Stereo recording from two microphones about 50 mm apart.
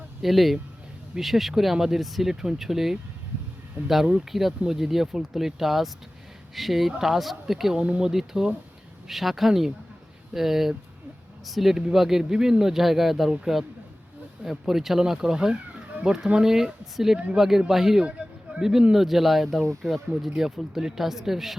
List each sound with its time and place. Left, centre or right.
0.2 s speech: centre
4.3 s speech: centre
7.8 s speech: right
8.1 s speech: centre
14.7 s speech: centre